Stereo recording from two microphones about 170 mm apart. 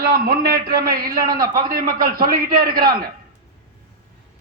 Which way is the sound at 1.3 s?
25° right (ahead or behind).